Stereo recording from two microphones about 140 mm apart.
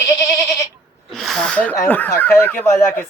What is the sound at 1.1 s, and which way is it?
Speech, centre (ahead or behind).